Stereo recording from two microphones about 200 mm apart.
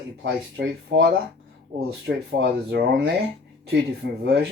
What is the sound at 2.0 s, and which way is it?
Speech, 60° right (ahead or behind).